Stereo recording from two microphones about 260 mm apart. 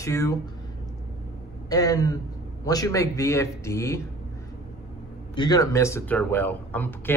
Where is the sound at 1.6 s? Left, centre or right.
Centre.